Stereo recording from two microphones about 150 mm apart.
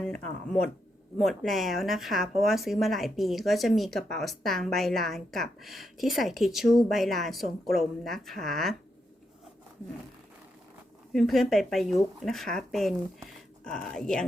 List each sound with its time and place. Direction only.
1.2 s speech: centre (ahead or behind)
11.1 s speech: centre (ahead or behind)